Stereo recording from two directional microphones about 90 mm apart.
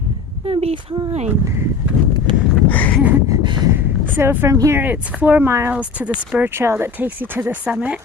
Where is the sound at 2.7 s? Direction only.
20° left (ahead or behind).